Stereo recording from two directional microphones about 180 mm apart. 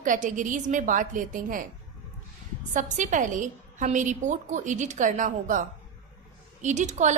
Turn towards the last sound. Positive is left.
turn(degrees=-40)  # may be behind; listen again after turning